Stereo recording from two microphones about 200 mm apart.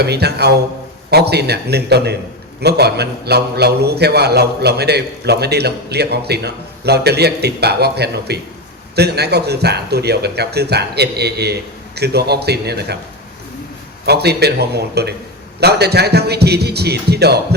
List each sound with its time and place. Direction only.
0.0 s a man's voice: 55° right (ahead or behind)
14.0 s a man's voice: 55° right (ahead or behind)